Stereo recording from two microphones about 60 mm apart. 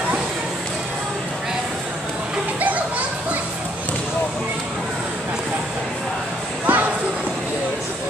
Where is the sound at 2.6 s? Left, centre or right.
Right.